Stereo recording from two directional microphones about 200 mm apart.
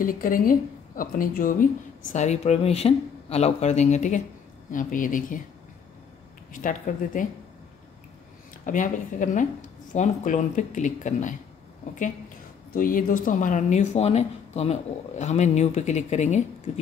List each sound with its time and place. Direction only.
0.0 s a woman's voice: 45° left (ahead or behind)
6.5 s speech: 40° left (ahead or behind)
8.6 s speech: 40° left (ahead or behind)
12.7 s a woman's voice: 45° left (ahead or behind)